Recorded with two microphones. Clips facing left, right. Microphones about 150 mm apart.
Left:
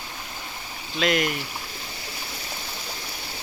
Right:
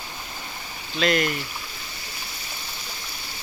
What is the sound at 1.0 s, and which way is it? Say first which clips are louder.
Speech: right 1 dB; 5° left (ahead or behind).